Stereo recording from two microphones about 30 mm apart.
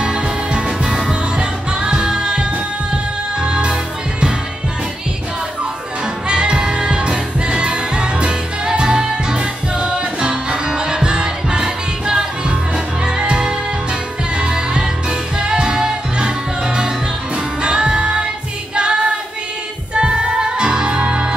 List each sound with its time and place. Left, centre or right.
0.0 s music: right
6.2 s music: right
18.8 s female singing: right
19.9 s music: right